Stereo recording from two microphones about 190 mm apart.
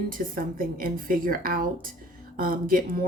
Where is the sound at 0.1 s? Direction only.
50° right (ahead or behind).